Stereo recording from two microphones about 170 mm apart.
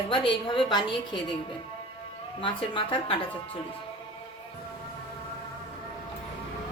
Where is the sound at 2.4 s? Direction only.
30° left (ahead or behind).